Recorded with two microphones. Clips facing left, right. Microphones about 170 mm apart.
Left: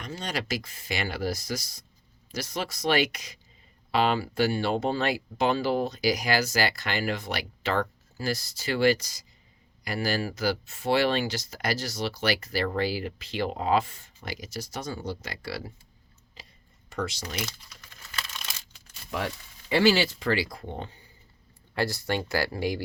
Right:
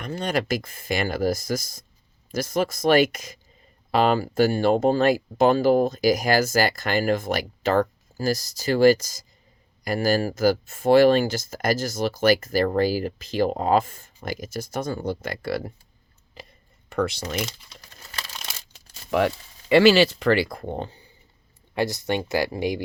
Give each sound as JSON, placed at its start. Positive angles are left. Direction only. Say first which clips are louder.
{"t": 0.0, "sound": "speech", "louder": "right 8 dB", "side_deg": -55}
{"t": 16.4, "sound": "a sound", "louder": "right 8 dB", "side_deg": -55}
{"t": 16.9, "sound": "speech", "louder": "right 7 dB", "side_deg": -60}
{"t": 17.7, "sound": "crumpling", "louder": "right 3 dB", "side_deg": -35}
{"t": 19.1, "sound": "speech", "louder": "right 10 dB", "side_deg": -80}
{"t": 20.7, "sound": "speech", "louder": "right 6 dB", "side_deg": -35}
{"t": 21.8, "sound": "speech", "louder": "right 4 dB", "side_deg": -20}